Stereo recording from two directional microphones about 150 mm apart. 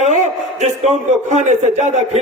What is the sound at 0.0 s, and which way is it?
A man's voice, 50° right (ahead or behind).